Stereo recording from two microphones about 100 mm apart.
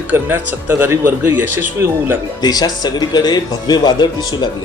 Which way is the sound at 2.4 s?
40° left (ahead or behind).